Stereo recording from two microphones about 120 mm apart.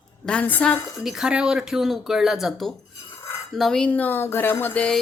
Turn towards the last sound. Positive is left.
turn(degrees=10)  # may be behind; listen again after turning